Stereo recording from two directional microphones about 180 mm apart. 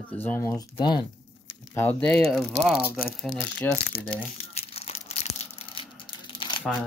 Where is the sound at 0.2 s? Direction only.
10° left (ahead or behind).